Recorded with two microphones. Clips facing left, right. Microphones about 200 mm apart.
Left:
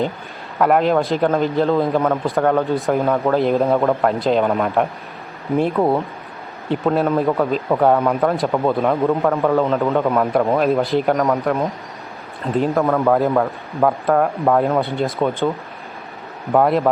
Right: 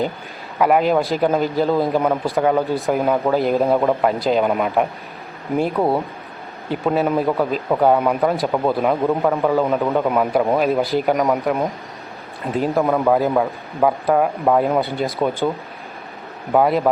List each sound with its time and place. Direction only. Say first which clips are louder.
0.6 s speech: even; 5° right (ahead or behind)
16.5 s speech: left 1 dB; centre (ahead or behind)